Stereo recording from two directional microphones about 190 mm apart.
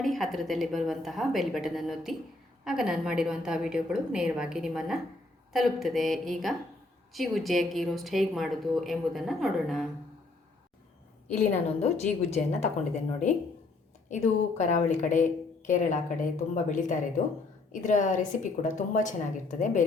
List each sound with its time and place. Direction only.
0.0 s a woman's voice: centre (ahead or behind)
11.3 s a woman's voice: 35° left (ahead or behind)
14.1 s a woman's voice: 40° left (ahead or behind)